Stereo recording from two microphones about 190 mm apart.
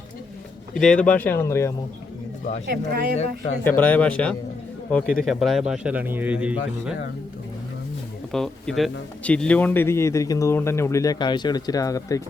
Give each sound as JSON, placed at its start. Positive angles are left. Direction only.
{"t": 0.7, "sound": "a man's voice", "side_deg": 5}
{"t": 2.6, "sound": "speech", "side_deg": -55}
{"t": 3.6, "sound": "a man's voice", "side_deg": 10}
{"t": 8.3, "sound": "a man's voice", "side_deg": 0}